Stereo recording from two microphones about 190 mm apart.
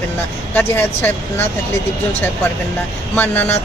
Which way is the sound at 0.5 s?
10° left (ahead or behind).